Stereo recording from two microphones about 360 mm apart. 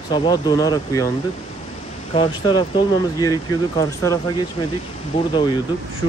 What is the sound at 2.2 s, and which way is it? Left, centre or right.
Speech, centre.